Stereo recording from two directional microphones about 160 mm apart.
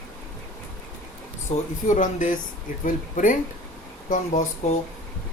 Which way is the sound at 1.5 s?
40° left (ahead or behind).